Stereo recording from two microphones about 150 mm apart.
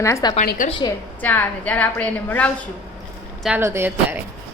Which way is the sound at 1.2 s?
10° left (ahead or behind).